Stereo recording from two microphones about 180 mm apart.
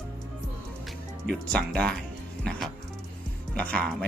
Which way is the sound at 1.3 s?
5° left (ahead or behind).